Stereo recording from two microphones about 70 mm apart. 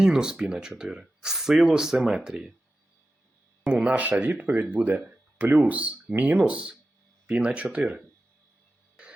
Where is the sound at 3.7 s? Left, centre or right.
Centre.